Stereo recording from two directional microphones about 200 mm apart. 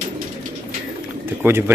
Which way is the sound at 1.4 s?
10° right (ahead or behind).